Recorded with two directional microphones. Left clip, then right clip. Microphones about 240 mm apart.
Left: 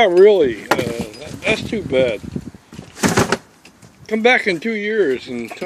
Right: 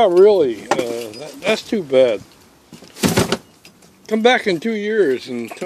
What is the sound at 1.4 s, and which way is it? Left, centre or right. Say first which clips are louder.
Speech: right 1 dB; right.